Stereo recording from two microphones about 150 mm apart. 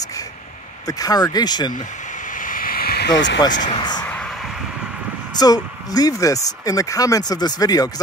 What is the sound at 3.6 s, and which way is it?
Speech, 30° left (ahead or behind).